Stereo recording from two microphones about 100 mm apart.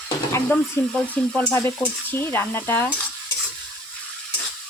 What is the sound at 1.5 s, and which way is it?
Speech, 30° left (ahead or behind).